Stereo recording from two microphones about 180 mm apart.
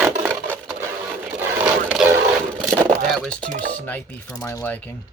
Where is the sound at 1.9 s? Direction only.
5° right (ahead or behind).